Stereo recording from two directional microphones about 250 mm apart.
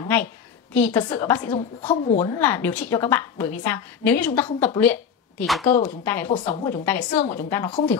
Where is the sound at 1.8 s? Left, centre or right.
Left.